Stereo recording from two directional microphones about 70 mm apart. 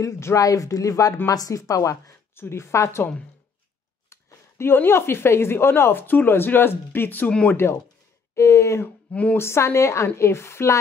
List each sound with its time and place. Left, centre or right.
0.4 s speech: left
2.3 s speech: left
4.1 s speech: left
8.4 s speech: left
8.8 s speech: centre
9.4 s speech: left